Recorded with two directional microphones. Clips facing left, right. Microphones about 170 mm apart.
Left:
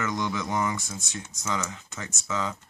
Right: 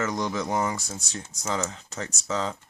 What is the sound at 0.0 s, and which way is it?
Speech, 35° right (ahead or behind).